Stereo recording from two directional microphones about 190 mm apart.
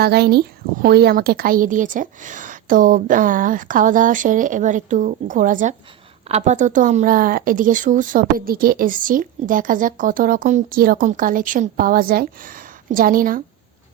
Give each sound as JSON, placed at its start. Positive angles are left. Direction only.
{"t": 0.0, "sound": "speech", "side_deg": -55}